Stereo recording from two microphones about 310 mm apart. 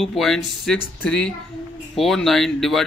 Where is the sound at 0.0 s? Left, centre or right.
Centre.